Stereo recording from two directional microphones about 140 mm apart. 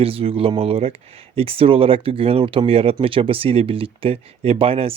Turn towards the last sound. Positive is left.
turn(degrees=-45)  # may be behind; listen again after turning